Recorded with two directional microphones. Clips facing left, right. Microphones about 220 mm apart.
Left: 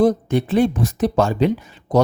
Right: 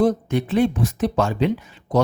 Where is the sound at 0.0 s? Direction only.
35° left (ahead or behind).